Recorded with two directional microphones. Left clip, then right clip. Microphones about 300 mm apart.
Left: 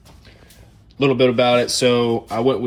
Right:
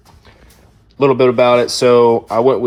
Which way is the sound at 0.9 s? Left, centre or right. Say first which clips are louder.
Right 5 dB; centre.